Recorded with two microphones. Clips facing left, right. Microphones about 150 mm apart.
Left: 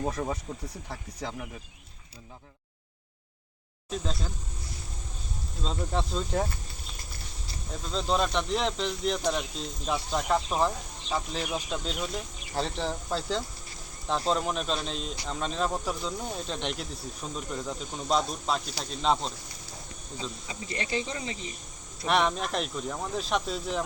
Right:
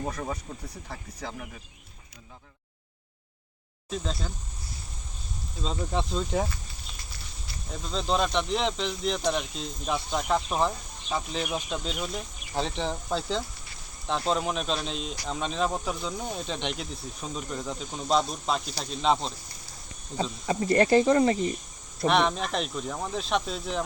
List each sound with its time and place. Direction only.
0.9 s speech: centre (ahead or behind)
3.8 s speech: centre (ahead or behind)
5.6 s speech: centre (ahead or behind)
7.7 s speech: centre (ahead or behind)
20.5 s speech: 55° right (ahead or behind)
22.0 s speech: 5° left (ahead or behind)